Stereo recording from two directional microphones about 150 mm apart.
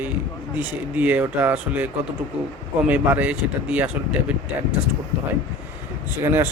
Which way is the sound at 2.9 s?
10° right (ahead or behind).